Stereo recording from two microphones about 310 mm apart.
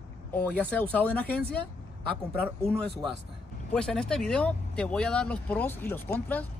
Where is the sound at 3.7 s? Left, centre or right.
Centre.